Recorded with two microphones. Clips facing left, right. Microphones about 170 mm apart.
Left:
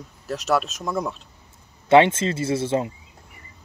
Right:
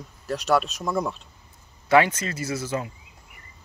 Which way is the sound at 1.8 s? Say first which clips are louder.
Left 4 dB; 25° left (ahead or behind).